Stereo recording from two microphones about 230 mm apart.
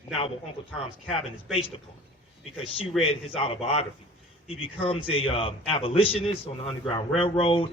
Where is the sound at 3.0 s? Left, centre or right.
Left.